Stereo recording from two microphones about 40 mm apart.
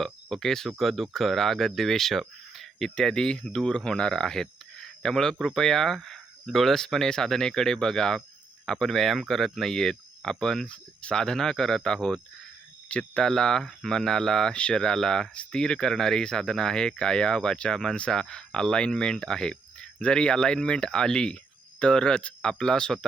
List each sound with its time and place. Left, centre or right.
0.0 s speech: centre
10.7 s speech: left
11.2 s speech: centre
14.5 s speech: left
14.8 s speech: centre